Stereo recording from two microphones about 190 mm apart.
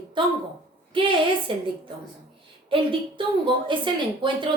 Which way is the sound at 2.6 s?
25° right (ahead or behind).